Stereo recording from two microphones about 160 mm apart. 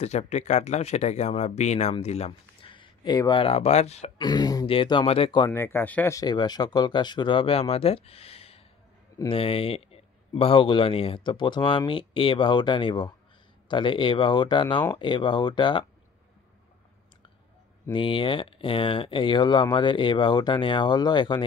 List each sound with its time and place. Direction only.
0.0 s speech: 45° left (ahead or behind)
4.2 s a man's voice: 25° left (ahead or behind)
5.5 s speech: 15° left (ahead or behind)
6.1 s a man's voice: 25° left (ahead or behind)
17.9 s a man's voice: 30° left (ahead or behind)